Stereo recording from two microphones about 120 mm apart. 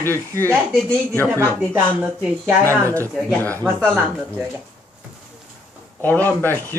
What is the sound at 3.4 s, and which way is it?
Speech, 15° left (ahead or behind).